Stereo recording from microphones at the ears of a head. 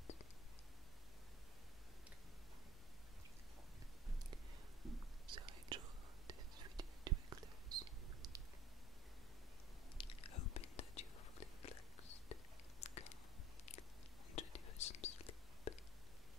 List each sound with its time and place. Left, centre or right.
5.2 s whispering: right
9.9 s whispering: left
12.8 s a sound: left
14.3 s whispering: left